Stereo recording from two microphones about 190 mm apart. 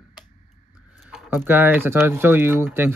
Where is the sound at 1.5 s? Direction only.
10° right (ahead or behind).